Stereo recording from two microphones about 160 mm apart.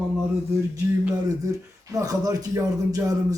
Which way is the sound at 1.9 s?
20° right (ahead or behind).